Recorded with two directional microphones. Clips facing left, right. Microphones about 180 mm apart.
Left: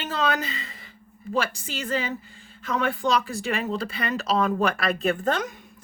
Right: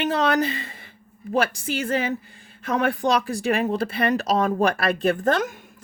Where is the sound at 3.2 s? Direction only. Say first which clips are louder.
Right 5 dB; 55° right (ahead or behind).